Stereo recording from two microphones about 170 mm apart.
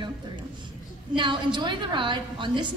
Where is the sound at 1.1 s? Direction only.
30° right (ahead or behind).